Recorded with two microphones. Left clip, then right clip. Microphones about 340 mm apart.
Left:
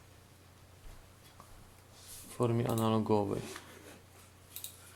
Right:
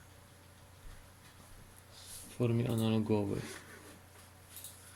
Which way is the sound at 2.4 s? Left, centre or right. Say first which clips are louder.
Left 3 dB; left.